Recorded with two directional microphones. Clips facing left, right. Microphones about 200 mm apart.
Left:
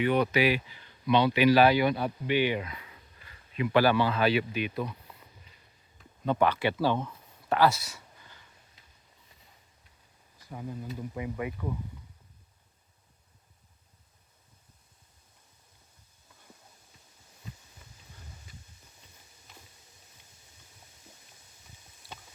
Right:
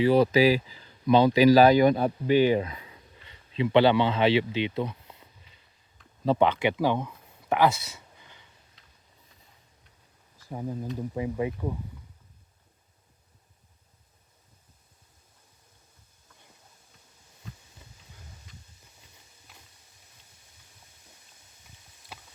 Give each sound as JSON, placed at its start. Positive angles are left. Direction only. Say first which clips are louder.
{"t": 0.0, "sound": "speech", "louder": "right 5 dB", "side_deg": -30}
{"t": 6.2, "sound": "speech", "louder": "right 3 dB", "side_deg": -25}
{"t": 10.5, "sound": "speech", "louder": "right 5 dB", "side_deg": -35}